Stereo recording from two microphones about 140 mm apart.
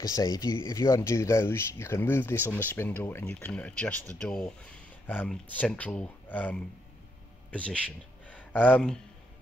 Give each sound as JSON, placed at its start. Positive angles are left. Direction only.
{"t": 0.0, "sound": "speech", "side_deg": 25}